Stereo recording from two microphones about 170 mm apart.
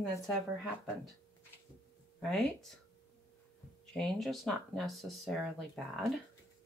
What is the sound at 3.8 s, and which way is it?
Speech, 5° left (ahead or behind).